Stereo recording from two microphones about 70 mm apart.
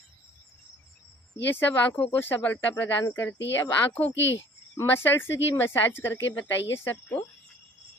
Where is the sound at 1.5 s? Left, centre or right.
Left.